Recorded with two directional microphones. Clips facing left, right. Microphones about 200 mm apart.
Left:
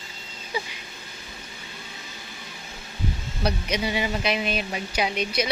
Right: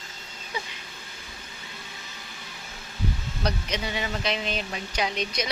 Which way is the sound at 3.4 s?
10° left (ahead or behind).